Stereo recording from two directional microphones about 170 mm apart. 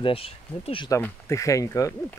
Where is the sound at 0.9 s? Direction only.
15° left (ahead or behind).